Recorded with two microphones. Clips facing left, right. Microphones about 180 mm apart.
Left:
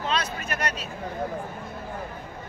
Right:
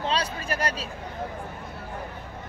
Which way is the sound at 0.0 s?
30° right (ahead or behind).